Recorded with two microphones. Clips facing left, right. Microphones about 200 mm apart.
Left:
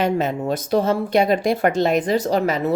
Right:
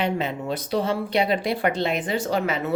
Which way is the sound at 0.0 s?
45° left (ahead or behind).